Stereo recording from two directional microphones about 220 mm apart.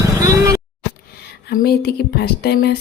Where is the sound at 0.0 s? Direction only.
15° right (ahead or behind).